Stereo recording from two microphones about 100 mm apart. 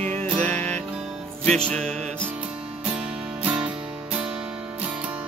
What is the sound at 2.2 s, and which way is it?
Music, 15° right (ahead or behind).